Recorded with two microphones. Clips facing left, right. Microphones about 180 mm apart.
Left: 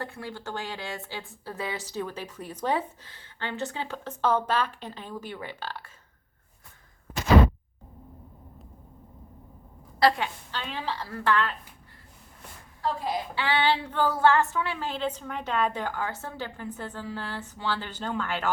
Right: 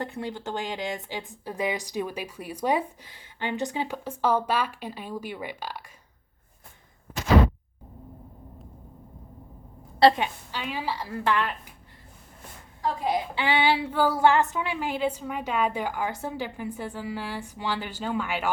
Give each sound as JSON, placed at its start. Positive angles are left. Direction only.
{"t": 0.0, "sound": "speech", "side_deg": -20}
{"t": 10.0, "sound": "a woman's voice", "side_deg": -25}
{"t": 10.5, "sound": "speech", "side_deg": -10}
{"t": 12.8, "sound": "speech", "side_deg": -15}